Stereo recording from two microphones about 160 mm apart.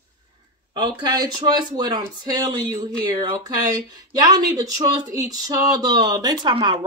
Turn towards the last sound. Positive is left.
turn(degrees=-30)  # may be behind; listen again after turning